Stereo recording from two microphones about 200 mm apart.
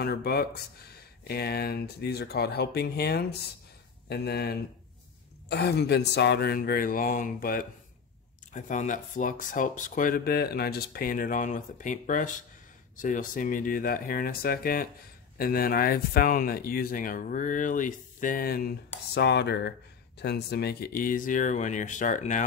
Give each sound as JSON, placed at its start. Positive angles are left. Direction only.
{"t": 0.0, "sound": "speech", "side_deg": 50}